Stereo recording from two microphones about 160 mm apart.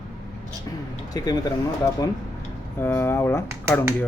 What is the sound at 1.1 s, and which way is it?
Speech, 25° left (ahead or behind).